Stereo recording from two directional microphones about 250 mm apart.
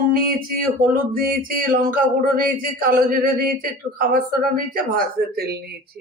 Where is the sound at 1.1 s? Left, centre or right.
Right.